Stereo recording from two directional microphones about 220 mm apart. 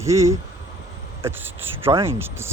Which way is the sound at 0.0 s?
15° right (ahead or behind).